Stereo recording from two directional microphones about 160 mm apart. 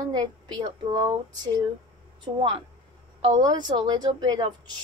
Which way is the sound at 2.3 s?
40° right (ahead or behind).